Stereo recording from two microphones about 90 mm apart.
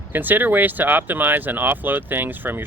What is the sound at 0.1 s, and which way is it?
Speech, 20° right (ahead or behind).